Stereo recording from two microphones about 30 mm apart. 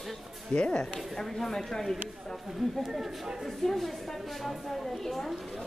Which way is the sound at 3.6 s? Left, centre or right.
Centre.